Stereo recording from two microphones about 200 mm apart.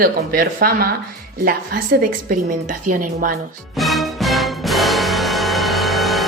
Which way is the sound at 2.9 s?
40° right (ahead or behind).